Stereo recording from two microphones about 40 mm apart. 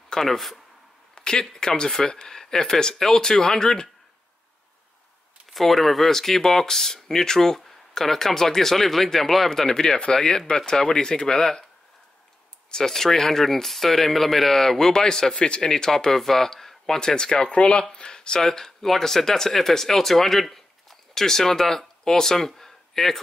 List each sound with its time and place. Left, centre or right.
0.1 s speech: centre
1.1 s a sound: centre
1.4 s speech: centre
5.5 s speech: centre
12.7 s speech: centre
15.3 s a man's voice: left; by 23.1 s centre